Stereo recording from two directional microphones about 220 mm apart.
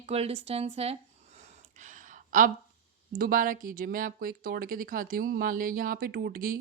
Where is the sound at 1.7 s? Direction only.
35° right (ahead or behind).